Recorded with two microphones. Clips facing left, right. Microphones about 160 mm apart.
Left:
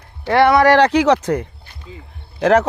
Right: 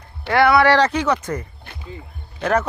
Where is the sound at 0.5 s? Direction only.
45° left (ahead or behind).